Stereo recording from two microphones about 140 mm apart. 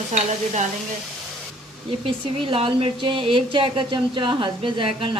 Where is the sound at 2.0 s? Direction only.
40° right (ahead or behind).